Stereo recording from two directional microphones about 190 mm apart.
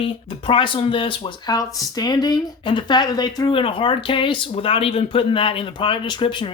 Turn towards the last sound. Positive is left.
turn(degrees=25)  # may be behind; listen again after turning